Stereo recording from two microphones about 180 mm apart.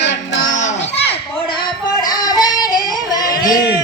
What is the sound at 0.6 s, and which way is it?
Children playing, 35° left (ahead or behind).